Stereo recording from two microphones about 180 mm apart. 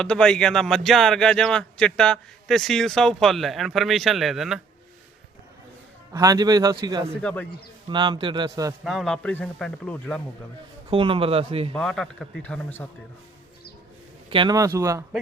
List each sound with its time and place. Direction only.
0.0 s speech: 5° left (ahead or behind)
6.1 s a man's voice: 20° right (ahead or behind)
7.1 s a man's voice: 5° left (ahead or behind)
7.9 s a man's voice: 25° right (ahead or behind)
8.8 s speech: centre (ahead or behind)
10.8 s speech: 30° right (ahead or behind)
11.7 s a man's voice: 5° left (ahead or behind)
14.3 s speech: 25° right (ahead or behind)